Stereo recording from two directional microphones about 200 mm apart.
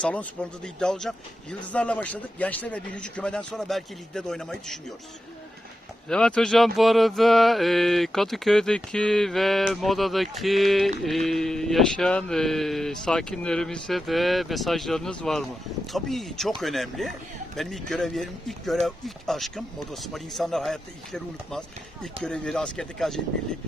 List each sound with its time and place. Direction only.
0.0 s a man's voice: 5° left (ahead or behind)
6.1 s a man's voice: 5° left (ahead or behind)